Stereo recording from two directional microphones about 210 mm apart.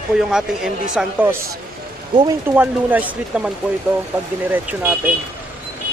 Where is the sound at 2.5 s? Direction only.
5° right (ahead or behind).